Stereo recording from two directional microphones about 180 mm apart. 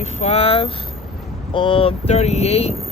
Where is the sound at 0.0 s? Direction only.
35° left (ahead or behind).